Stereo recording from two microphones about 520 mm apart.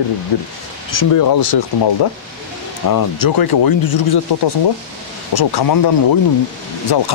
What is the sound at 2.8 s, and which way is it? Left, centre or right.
Speech, left.